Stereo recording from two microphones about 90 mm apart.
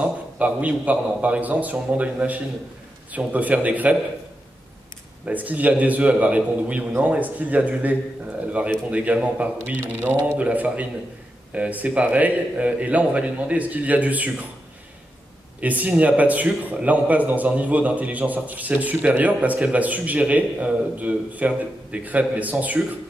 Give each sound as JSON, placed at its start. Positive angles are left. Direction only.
{"t": 0.0, "sound": "speech", "side_deg": -15}
{"t": 5.2, "sound": "speech", "side_deg": -15}
{"t": 15.6, "sound": "speech", "side_deg": -15}